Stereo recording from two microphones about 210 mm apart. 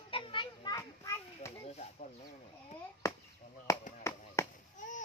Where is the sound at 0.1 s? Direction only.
25° left (ahead or behind).